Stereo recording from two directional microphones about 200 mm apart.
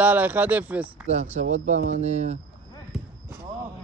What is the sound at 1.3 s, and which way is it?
Speech, 35° right (ahead or behind).